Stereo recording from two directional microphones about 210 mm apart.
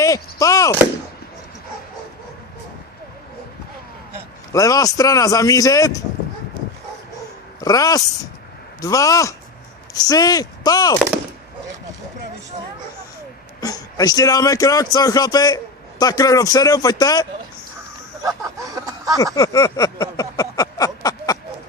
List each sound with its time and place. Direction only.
0.0 s speech: 15° left (ahead or behind)
4.5 s a man's voice: 15° left (ahead or behind)
7.6 s a man's voice: 15° left (ahead or behind)
13.6 s a man's voice: 15° left (ahead or behind)
18.2 s a sound: 15° right (ahead or behind)
19.2 s a sound: 15° left (ahead or behind)